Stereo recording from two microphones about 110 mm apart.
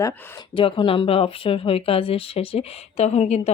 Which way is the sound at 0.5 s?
55° left (ahead or behind).